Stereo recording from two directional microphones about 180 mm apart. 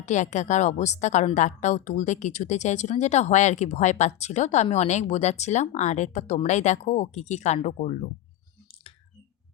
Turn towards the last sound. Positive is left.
turn(degrees=40)  # may be behind; listen again after turning